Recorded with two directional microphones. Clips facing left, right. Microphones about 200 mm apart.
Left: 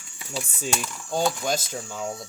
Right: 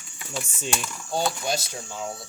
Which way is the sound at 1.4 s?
50° left (ahead or behind).